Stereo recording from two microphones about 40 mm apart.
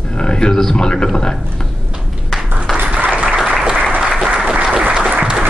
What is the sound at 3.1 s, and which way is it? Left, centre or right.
Applause, right.